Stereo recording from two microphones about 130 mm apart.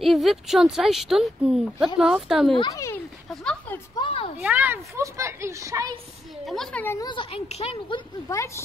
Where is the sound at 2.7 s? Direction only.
25° left (ahead or behind).